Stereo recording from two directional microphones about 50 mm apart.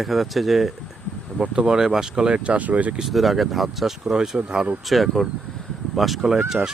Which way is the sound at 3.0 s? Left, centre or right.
Centre.